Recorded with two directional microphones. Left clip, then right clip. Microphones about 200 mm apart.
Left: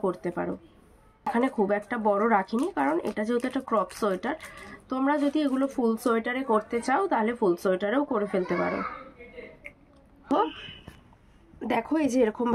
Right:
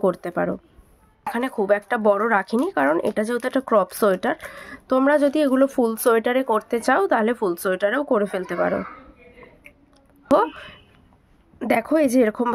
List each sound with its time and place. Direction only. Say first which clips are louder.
0.0 s speech: right 8 dB; 60° right (ahead or behind)
10.3 s speech: right 8 dB; 60° right (ahead or behind)